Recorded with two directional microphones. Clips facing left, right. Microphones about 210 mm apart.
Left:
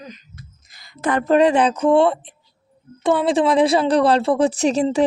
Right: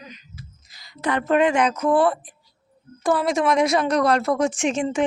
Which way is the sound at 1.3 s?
35° left (ahead or behind).